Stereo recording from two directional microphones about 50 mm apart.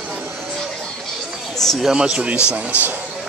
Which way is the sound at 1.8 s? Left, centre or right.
Centre.